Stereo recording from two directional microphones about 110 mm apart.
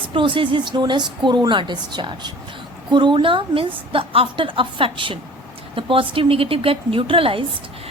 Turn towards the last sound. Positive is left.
turn(degrees=-55)  # may be behind; listen again after turning